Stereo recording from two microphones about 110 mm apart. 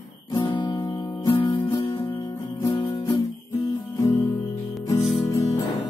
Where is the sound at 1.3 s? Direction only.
50° left (ahead or behind).